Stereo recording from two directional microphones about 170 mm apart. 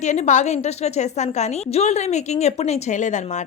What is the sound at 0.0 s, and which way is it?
A woman's voice, 45° left (ahead or behind).